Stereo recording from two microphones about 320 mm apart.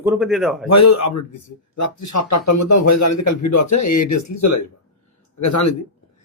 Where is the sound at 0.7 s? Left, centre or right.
Left.